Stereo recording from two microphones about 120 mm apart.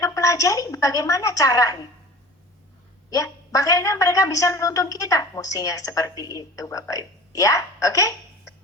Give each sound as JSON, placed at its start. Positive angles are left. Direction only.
{"t": 0.0, "sound": "a woman's voice", "side_deg": 25}
{"t": 3.1, "sound": "a woman's voice", "side_deg": 30}